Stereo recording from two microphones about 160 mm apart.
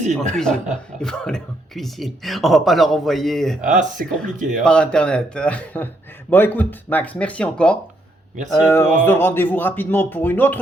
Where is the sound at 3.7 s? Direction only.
50° right (ahead or behind).